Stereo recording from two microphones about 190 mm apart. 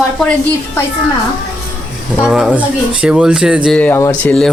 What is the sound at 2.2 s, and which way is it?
Speech, 5° right (ahead or behind).